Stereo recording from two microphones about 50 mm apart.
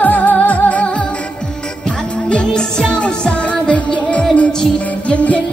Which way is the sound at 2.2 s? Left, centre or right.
Centre.